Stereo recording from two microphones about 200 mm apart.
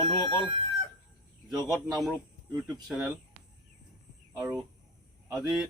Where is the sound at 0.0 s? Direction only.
25° right (ahead or behind).